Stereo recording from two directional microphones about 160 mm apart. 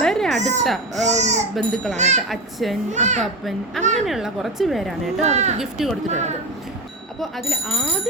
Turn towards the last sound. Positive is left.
turn(degrees=0)  # may be behind; listen again after turning